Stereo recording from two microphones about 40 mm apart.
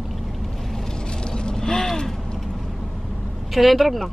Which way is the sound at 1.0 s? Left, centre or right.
Left.